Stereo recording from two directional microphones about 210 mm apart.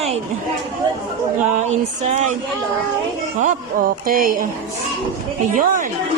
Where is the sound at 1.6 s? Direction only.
30° right (ahead or behind).